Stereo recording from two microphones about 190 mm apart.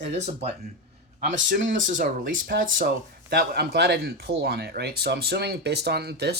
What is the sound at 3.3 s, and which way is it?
Speech, 55° right (ahead or behind).